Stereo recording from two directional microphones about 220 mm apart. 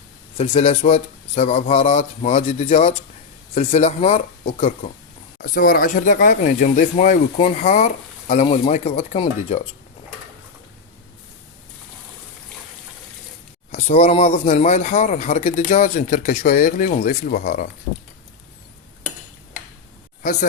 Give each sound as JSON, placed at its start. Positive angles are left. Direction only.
{"t": 0.3, "sound": "speech", "side_deg": 30}
{"t": 5.4, "sound": "speech", "side_deg": 40}
{"t": 13.7, "sound": "speech", "side_deg": 30}